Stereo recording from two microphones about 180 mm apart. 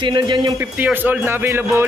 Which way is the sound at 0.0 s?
25° right (ahead or behind).